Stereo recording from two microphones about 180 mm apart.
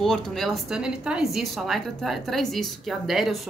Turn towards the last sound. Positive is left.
turn(degrees=0)  # may be behind; listen again after turning